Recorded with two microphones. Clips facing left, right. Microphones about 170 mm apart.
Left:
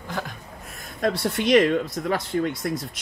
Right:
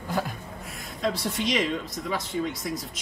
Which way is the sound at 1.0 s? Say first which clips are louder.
Left 4 dB; 65° left (ahead or behind).